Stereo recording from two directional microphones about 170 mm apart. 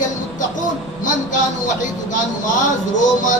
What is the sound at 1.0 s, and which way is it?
Speech, 50° left (ahead or behind).